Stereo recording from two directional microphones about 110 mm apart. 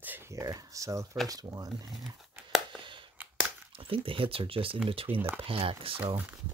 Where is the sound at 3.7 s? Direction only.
55° right (ahead or behind).